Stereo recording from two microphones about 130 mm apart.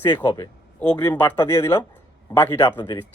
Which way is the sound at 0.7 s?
15° left (ahead or behind).